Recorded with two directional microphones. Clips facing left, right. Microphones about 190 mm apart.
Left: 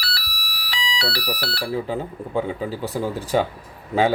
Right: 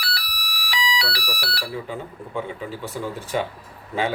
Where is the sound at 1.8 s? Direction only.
35° left (ahead or behind).